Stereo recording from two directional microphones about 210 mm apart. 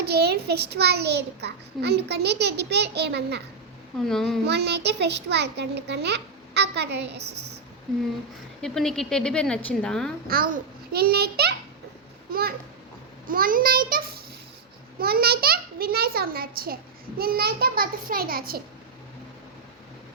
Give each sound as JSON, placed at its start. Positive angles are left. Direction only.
{"t": 0.0, "sound": "a child's voice", "side_deg": -50}
{"t": 4.0, "sound": "a woman's voice", "side_deg": 0}
{"t": 4.4, "sound": "a child's voice", "side_deg": -50}
{"t": 8.6, "sound": "a woman's voice", "side_deg": 0}
{"t": 10.2, "sound": "a child's voice", "side_deg": -45}